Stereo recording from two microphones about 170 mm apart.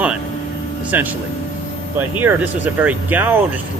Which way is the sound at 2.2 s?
10° right (ahead or behind).